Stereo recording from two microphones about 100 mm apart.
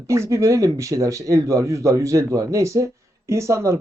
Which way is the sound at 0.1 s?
30° right (ahead or behind).